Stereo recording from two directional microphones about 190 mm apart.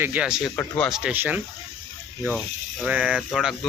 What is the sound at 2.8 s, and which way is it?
Speech, 5° right (ahead or behind).